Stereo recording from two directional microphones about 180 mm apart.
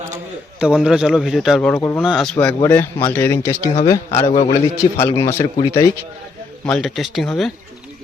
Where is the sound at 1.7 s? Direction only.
15° left (ahead or behind).